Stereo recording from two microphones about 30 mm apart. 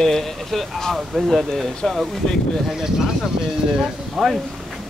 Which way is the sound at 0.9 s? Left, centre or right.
Centre.